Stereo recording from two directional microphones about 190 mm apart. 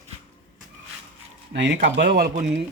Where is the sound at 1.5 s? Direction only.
65° right (ahead or behind).